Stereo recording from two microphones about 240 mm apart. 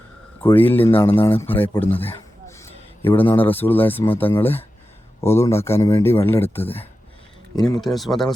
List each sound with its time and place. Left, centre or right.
0.5 s speech: centre
0.9 s speech: left
1.2 s a man's voice: centre
7.9 s speech: centre